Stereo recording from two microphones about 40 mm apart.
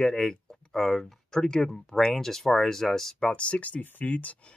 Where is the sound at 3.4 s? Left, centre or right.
Left.